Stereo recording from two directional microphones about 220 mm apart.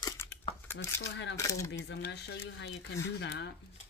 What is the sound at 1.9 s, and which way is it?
Speech, 50° left (ahead or behind).